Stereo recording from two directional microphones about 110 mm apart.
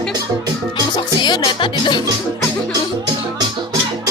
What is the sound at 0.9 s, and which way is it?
Speech, 40° left (ahead or behind).